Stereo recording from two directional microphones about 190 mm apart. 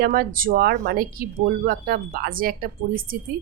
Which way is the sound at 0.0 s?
50° right (ahead or behind).